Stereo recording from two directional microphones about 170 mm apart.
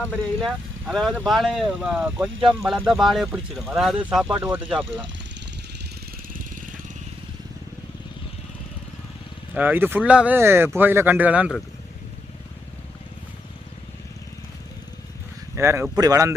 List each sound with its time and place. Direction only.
0.4 s speech: centre (ahead or behind)
6.3 s vehicle: 50° right (ahead or behind)
9.6 s speech: 10° right (ahead or behind)
15.5 s speech: 15° right (ahead or behind)